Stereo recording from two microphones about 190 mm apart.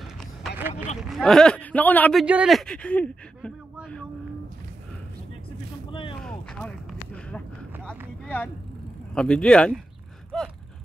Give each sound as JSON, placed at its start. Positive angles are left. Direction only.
{"t": 0.6, "sound": "speech", "side_deg": -10}
{"t": 1.0, "sound": "speech", "side_deg": 0}
{"t": 2.2, "sound": "speech", "side_deg": -5}
{"t": 5.9, "sound": "a sound", "side_deg": 25}
{"t": 6.2, "sound": "a sound", "side_deg": 5}
{"t": 9.1, "sound": "speech", "side_deg": 5}
{"t": 10.3, "sound": "gasp", "side_deg": 5}